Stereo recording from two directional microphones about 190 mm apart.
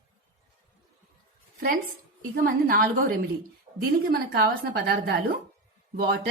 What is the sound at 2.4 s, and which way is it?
A woman's voice, 50° right (ahead or behind).